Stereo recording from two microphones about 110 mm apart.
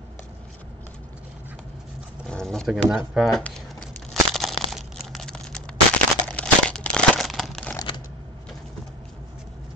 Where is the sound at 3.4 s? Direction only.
10° left (ahead or behind).